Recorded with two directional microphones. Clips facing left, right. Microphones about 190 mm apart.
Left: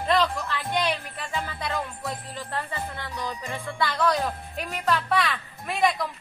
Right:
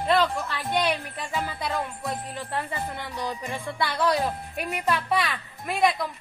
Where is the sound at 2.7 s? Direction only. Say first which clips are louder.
Right 1 dB; 15° right (ahead or behind).